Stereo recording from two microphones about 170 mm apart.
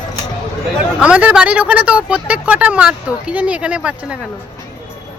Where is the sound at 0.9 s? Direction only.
5° right (ahead or behind).